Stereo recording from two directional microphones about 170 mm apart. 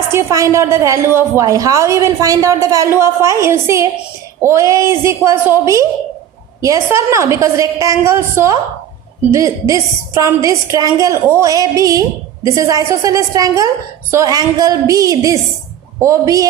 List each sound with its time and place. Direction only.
0.1 s a woman's voice: 15° right (ahead or behind)